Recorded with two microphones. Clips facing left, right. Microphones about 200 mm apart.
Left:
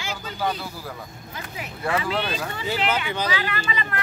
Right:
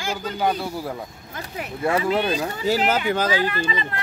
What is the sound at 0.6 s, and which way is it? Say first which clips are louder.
Speech: right 7 dB; 25° right (ahead or behind).